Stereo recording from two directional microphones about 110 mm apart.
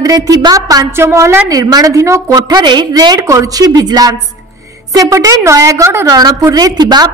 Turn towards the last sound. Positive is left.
turn(degrees=-40)  # may be behind; listen again after turning